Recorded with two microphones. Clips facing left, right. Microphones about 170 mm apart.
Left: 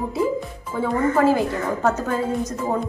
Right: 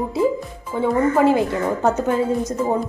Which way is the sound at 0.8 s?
20° right (ahead or behind).